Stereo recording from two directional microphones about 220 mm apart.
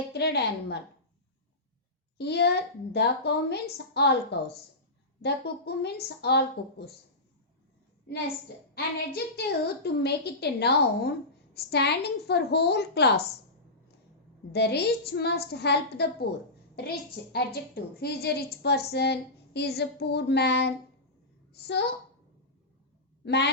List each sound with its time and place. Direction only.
0.1 s a woman's voice: 50° left (ahead or behind)
2.1 s a woman's voice: 50° left (ahead or behind)
8.7 s a woman's voice: 45° left (ahead or behind)
14.5 s a woman's voice: 50° left (ahead or behind)
23.2 s speech: 50° left (ahead or behind)